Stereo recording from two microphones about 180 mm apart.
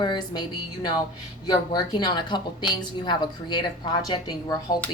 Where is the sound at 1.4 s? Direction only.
20° left (ahead or behind).